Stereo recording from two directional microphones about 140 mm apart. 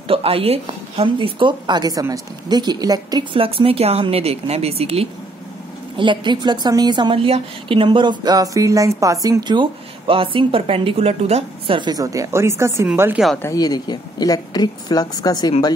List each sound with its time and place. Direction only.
0.1 s a woman's voice: 45° right (ahead or behind); by 3.3 s 30° right (ahead or behind)
3.3 s speech: 40° right (ahead or behind)
5.9 s a woman's voice: 35° right (ahead or behind); by 13.2 s 15° right (ahead or behind)
13.4 s speech: 25° left (ahead or behind)